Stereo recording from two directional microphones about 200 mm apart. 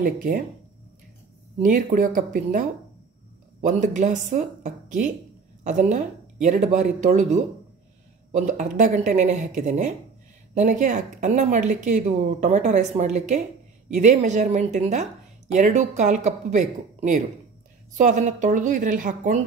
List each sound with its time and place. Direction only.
0.0 s speech: 40° right (ahead or behind)
1.6 s speech: 40° right (ahead or behind)